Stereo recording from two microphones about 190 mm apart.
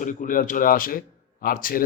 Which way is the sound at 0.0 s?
45° left (ahead or behind).